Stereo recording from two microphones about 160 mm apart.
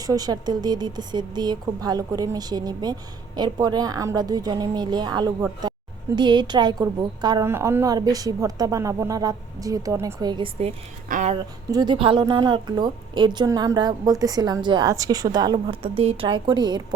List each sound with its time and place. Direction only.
0.0 s a woman's voice: 25° right (ahead or behind)
5.6 s a sound: 25° right (ahead or behind)
6.1 s a woman's voice: 30° right (ahead or behind)
7.4 s a woman's voice: 15° right (ahead or behind)
11.1 s speech: 50° right (ahead or behind)
11.7 s a woman's voice: 25° right (ahead or behind)